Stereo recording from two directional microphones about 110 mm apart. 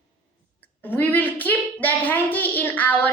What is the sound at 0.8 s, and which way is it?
A woman's voice, 15° left (ahead or behind).